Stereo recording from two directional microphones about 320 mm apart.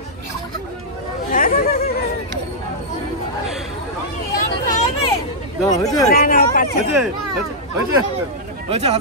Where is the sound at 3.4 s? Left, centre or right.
Centre.